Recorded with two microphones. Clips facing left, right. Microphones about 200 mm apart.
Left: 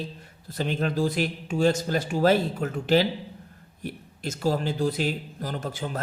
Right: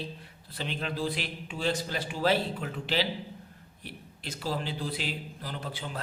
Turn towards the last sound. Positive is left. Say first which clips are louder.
# left 6 dB
turn(degrees=45)  # may be behind; listen again after turning